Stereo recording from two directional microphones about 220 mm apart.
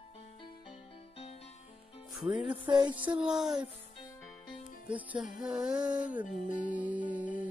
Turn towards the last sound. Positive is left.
turn(degrees=35)  # may be behind; listen again after turning